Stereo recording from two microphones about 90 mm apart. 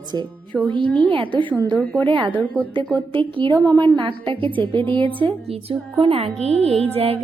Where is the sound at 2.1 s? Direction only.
75° right (ahead or behind).